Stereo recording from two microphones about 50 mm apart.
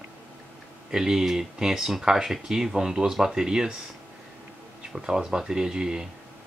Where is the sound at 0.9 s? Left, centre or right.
Centre.